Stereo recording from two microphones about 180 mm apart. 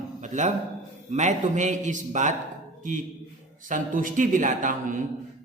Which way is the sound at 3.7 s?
50° right (ahead or behind).